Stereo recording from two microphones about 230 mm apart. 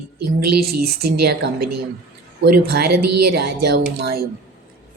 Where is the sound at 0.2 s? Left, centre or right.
Right.